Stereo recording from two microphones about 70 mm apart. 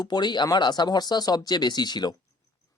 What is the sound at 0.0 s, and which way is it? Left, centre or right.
Speech, left.